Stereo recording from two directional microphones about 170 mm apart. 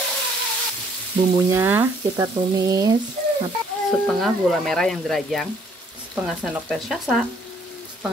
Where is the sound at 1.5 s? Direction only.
15° right (ahead or behind).